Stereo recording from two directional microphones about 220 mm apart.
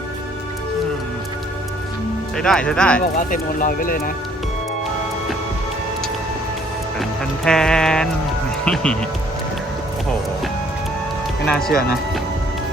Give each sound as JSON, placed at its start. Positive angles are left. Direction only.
{"t": 2.3, "sound": "speech", "side_deg": 5}
{"t": 3.2, "sound": "speech", "side_deg": 40}
{"t": 7.0, "sound": "speech", "side_deg": 0}
{"t": 11.4, "sound": "speech", "side_deg": 0}